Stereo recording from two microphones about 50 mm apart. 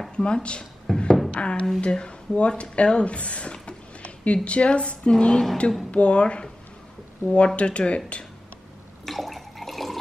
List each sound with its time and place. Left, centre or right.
0.1 s speech: left
0.9 s music: centre
1.3 s a woman's voice: left
9.0 s water: centre